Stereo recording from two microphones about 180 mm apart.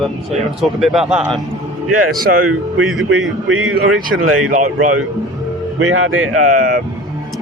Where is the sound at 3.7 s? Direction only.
60° right (ahead or behind).